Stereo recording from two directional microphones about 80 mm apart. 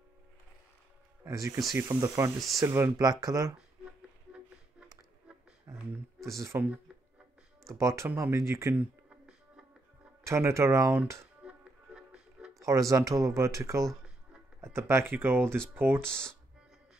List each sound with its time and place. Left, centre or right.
1.2 s speech: right
3.0 s speech: right
5.7 s a sound: right
7.7 s speech: right
10.2 s speech: right
11.4 s music: centre
12.5 s speech: right